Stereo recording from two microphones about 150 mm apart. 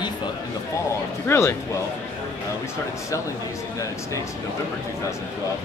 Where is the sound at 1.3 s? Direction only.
20° left (ahead or behind).